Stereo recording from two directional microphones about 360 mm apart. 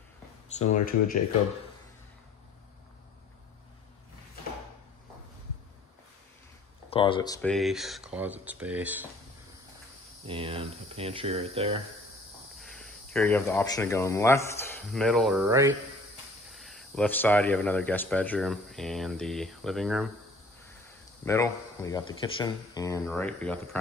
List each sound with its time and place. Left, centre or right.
0.5 s speech: centre
6.9 s speech: centre
7.5 s speech: centre
10.2 s speech: centre
12.5 s speech: centre
21.3 s speech: centre